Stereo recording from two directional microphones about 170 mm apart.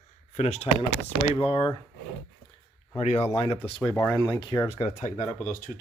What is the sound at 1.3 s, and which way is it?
Speech, 30° left (ahead or behind).